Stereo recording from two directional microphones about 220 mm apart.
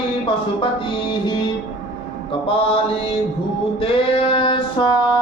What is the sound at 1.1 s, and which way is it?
Music, 20° left (ahead or behind).